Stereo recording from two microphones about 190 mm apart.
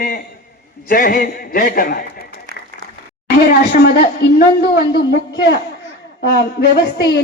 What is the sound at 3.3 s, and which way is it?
A man's voice, 55° left (ahead or behind).